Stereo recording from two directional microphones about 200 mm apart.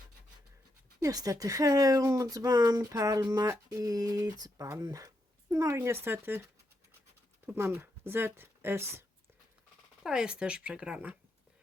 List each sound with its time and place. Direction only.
0.9 s speech: 20° right (ahead or behind)
7.4 s speech: 10° right (ahead or behind)